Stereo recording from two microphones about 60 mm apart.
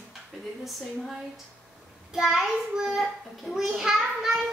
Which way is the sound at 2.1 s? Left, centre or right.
Centre.